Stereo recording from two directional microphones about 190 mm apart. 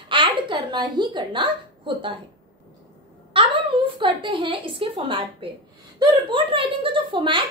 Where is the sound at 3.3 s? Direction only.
25° right (ahead or behind).